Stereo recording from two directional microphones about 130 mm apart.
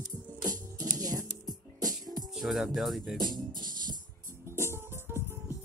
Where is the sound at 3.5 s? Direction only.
90° right.